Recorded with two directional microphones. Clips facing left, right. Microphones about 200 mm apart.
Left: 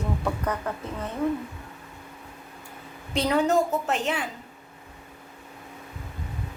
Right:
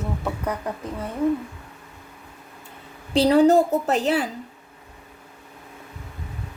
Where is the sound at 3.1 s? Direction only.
35° right (ahead or behind).